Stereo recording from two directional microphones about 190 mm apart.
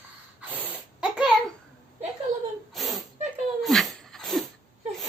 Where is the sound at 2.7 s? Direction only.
Centre (ahead or behind).